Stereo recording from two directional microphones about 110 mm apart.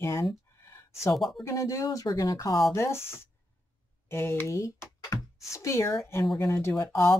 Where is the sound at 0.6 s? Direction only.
25° left (ahead or behind).